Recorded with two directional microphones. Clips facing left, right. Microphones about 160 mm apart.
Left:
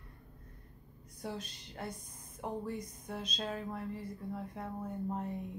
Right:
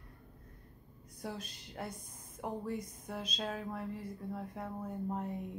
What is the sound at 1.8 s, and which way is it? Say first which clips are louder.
Speech: even; 5° right (ahead or behind).